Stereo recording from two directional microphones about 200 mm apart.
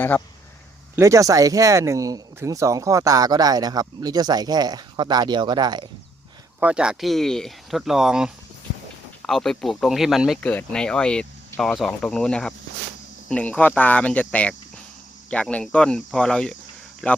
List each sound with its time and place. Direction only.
0.9 s speech: 15° right (ahead or behind)
6.6 s speech: 5° right (ahead or behind)